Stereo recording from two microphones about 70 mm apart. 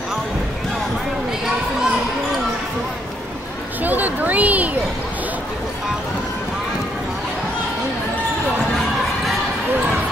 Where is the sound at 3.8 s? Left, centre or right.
Right.